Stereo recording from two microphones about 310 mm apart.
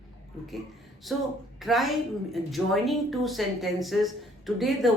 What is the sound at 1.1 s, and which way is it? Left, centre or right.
A woman's voice, centre.